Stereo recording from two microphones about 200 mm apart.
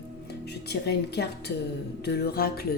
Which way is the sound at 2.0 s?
55° left (ahead or behind).